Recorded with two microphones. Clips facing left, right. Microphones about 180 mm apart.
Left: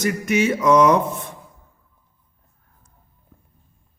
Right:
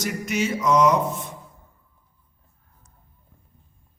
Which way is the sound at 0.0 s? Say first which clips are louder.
Left 6 dB; 60° left (ahead or behind).